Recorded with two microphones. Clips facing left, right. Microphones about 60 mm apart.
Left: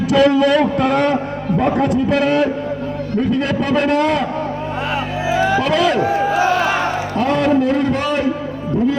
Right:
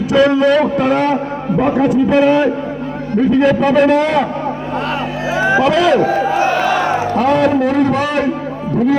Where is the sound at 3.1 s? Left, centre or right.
Right.